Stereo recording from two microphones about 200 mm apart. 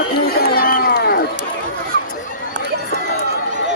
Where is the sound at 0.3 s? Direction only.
45° left (ahead or behind).